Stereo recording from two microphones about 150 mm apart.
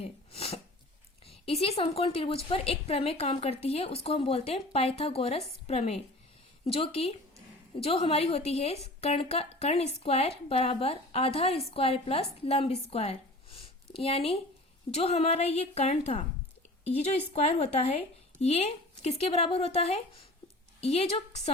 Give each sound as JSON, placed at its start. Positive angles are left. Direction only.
{"t": 0.0, "sound": "sneeze", "side_deg": 40}
{"t": 1.3, "sound": "a woman's voice", "side_deg": 40}